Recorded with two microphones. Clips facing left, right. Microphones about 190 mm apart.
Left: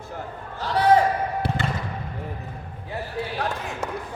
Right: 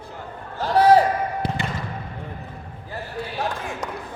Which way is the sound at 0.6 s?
40° right (ahead or behind).